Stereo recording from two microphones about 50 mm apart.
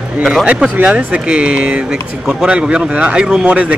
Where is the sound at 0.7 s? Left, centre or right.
Right.